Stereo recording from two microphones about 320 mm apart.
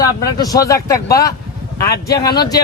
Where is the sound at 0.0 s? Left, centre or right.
Centre.